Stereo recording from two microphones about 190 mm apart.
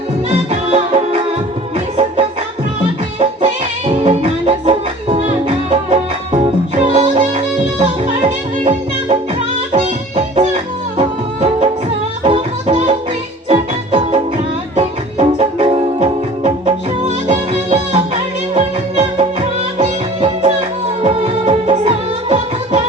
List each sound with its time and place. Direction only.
0.3 s music: 35° right (ahead or behind)
9.7 s music: 30° right (ahead or behind)